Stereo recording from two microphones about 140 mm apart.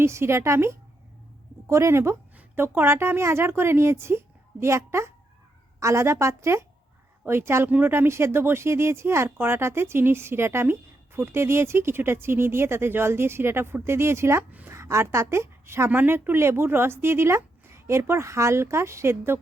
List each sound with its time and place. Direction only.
0.0 s a woman's voice: 20° right (ahead or behind)